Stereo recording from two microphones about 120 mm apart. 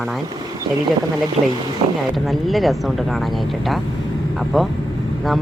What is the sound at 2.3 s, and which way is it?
Speech, centre (ahead or behind).